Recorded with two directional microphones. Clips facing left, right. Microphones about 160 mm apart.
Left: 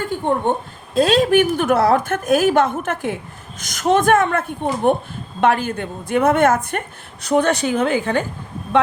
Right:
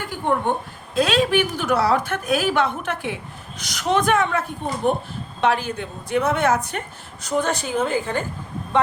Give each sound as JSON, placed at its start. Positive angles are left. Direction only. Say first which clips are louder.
{"t": 0.1, "sound": "speech", "louder": "left 1 dB", "side_deg": 25}
{"t": 0.9, "sound": "a woman's voice", "louder": "left 5 dB", "side_deg": 40}